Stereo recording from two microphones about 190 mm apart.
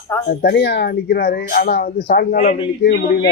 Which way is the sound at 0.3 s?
60° left (ahead or behind).